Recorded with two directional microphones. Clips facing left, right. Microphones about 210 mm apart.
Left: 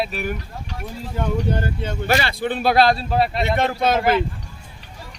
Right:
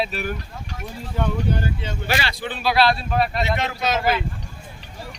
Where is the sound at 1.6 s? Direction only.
55° left (ahead or behind); by 3.4 s 30° left (ahead or behind).